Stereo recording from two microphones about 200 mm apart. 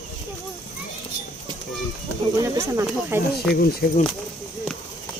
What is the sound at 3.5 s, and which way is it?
Speech, 50° left (ahead or behind).